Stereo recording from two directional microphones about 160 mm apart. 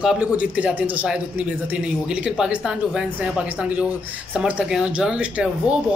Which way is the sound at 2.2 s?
5° right (ahead or behind).